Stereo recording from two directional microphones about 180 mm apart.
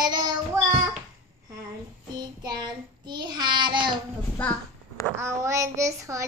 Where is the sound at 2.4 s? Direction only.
25° right (ahead or behind).